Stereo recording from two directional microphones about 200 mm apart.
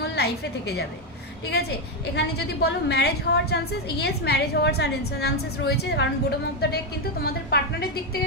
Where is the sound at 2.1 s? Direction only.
55° left (ahead or behind).